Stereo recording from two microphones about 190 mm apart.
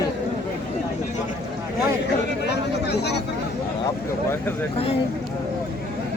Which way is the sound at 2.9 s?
60° left (ahead or behind).